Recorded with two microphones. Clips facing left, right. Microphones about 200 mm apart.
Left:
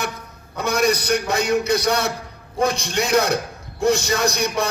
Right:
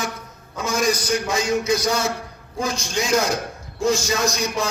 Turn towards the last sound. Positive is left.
turn(degrees=60)  # may be behind; listen again after turning